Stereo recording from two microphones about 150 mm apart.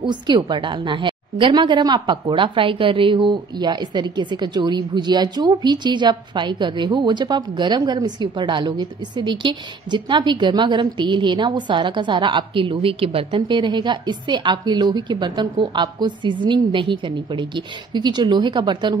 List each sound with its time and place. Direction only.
0.0 s a woman's voice: 30° right (ahead or behind)